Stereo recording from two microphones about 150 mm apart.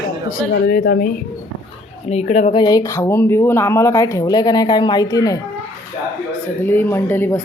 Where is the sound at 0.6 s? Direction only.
90° left; by 1.2 s 75° left (ahead or behind).